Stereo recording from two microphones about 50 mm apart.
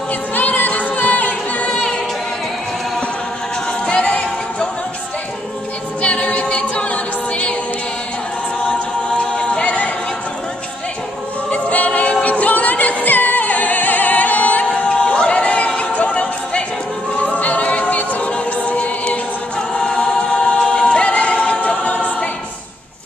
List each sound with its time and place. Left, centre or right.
0.3 s a capella: left
1.7 s a capella: centre
3.8 s music: centre
6.0 s a capella: left
9.3 s a capella: centre
11.5 s a capella: left
14.9 s a sound: centre
15.7 s music: left
17.2 s a capella: left
18.3 s choir: left